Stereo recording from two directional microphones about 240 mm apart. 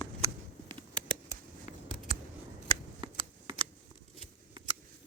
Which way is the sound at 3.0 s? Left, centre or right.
Centre.